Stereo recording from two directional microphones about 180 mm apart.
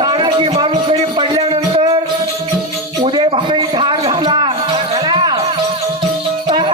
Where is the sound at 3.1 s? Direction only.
25° right (ahead or behind).